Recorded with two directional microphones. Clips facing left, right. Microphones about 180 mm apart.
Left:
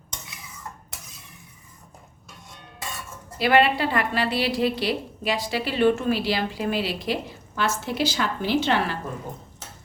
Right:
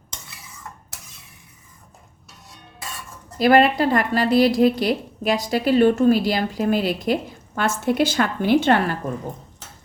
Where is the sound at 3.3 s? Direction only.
40° right (ahead or behind).